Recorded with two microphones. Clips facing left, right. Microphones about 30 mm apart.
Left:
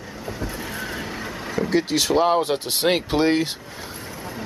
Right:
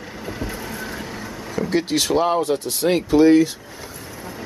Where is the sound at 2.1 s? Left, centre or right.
Centre.